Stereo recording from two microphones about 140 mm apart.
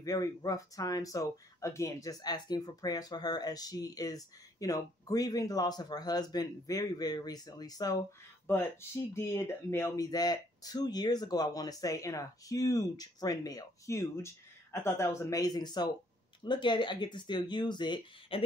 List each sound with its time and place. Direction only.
0.0 s speech: 25° left (ahead or behind)
8.5 s speech: 15° left (ahead or behind); by 18.4 s 35° left (ahead or behind)